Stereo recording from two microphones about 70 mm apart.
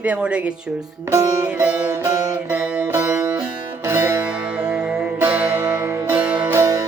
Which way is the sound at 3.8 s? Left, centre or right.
Right.